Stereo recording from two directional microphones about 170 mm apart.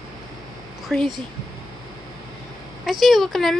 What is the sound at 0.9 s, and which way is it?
Speech, 5° left (ahead or behind).